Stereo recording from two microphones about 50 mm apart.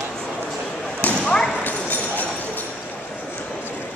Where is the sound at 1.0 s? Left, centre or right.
Left.